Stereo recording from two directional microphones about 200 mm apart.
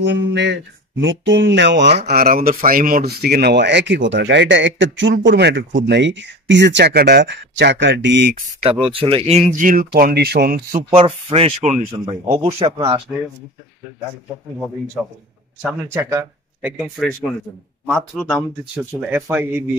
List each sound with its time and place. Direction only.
0.0 s speech: 60° right (ahead or behind)
2.0 s speech: 50° right (ahead or behind)
8.6 s speech: 25° right (ahead or behind); by 10.6 s 55° right (ahead or behind)
10.9 s speech: 30° right (ahead or behind)
15.6 s speech: 10° right (ahead or behind)
18.9 s speech: 10° right (ahead or behind)